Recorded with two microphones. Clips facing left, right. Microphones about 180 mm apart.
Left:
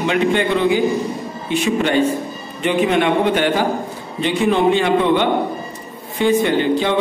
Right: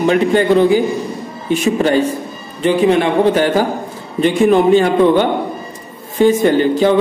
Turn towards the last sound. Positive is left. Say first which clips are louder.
# right 5 dB
turn(degrees=-40)  # may be behind; listen again after turning